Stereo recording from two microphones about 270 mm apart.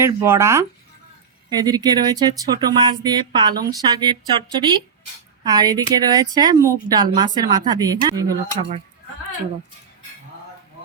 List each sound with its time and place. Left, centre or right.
0.0 s speech: centre